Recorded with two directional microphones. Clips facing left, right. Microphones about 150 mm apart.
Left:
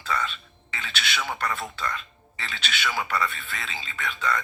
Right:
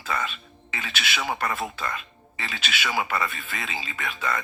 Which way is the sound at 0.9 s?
10° right (ahead or behind).